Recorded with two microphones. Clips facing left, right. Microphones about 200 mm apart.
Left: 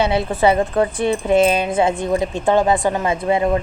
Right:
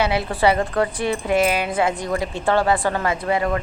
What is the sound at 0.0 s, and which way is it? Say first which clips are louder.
A woman's voice: left 3 dB; 25° left (ahead or behind).